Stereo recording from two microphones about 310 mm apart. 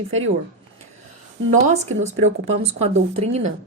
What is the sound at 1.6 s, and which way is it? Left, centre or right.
Speech, right.